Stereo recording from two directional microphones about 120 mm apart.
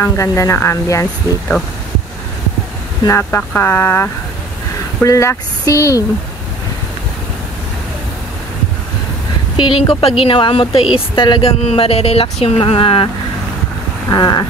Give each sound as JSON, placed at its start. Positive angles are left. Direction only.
{"t": 0.0, "sound": "speech", "side_deg": 25}
{"t": 3.0, "sound": "speech", "side_deg": 25}
{"t": 9.6, "sound": "speech", "side_deg": 40}
{"t": 11.4, "sound": "speech", "side_deg": 55}
{"t": 14.1, "sound": "a sound", "side_deg": 35}